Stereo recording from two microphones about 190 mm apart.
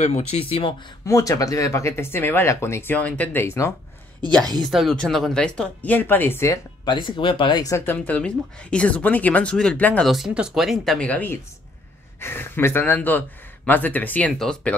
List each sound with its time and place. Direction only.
0.0 s speech: 35° left (ahead or behind)
1.0 s speech: 15° left (ahead or behind)
4.6 s speech: centre (ahead or behind)